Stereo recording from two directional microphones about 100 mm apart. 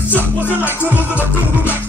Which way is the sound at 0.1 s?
20° left (ahead or behind).